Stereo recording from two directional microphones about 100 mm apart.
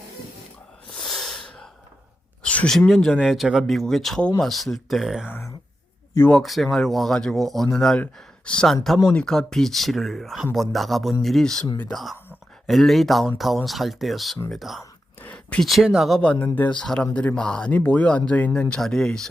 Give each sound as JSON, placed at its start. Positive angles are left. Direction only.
{"t": 0.9, "sound": "sneeze", "side_deg": 5}
{"t": 2.4, "sound": "a sound", "side_deg": 10}
{"t": 2.7, "sound": "speech", "side_deg": 0}
{"t": 5.3, "sound": "speech", "side_deg": 30}
{"t": 6.3, "sound": "speech", "side_deg": 0}
{"t": 12.6, "sound": "speech", "side_deg": 0}
{"t": 15.2, "sound": "a sound", "side_deg": 15}
{"t": 15.6, "sound": "speech", "side_deg": 0}